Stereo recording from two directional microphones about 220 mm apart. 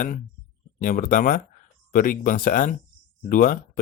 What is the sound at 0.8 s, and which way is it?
Speech, 35° left (ahead or behind).